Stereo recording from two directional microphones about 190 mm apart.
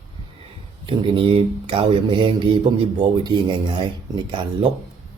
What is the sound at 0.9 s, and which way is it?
Speech, 25° right (ahead or behind).